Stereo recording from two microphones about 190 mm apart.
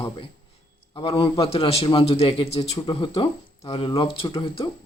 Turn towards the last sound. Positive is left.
turn(degrees=25)  # may be behind; listen again after turning